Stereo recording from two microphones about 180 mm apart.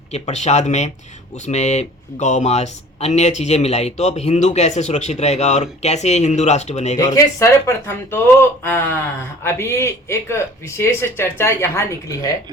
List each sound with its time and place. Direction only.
0.1 s speech: 40° left (ahead or behind)
6.9 s speech: 20° left (ahead or behind)